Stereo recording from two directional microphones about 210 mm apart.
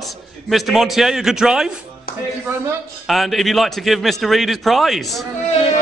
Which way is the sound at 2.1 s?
45° left (ahead or behind).